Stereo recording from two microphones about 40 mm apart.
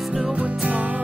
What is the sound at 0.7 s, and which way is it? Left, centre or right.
Music, right.